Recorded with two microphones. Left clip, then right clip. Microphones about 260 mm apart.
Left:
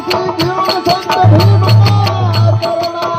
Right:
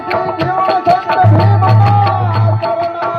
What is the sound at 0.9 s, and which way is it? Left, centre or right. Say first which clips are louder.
Music: even; left.